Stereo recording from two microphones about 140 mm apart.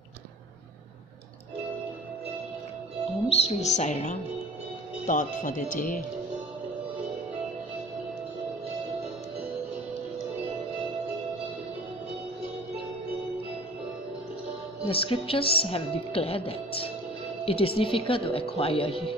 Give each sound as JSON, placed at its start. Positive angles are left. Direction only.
{"t": 3.3, "sound": "speech", "side_deg": 50}
{"t": 5.0, "sound": "speech", "side_deg": 70}
{"t": 14.9, "sound": "speech", "side_deg": 40}